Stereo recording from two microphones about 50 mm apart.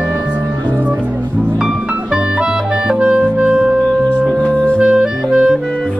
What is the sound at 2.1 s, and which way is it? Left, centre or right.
Music, centre.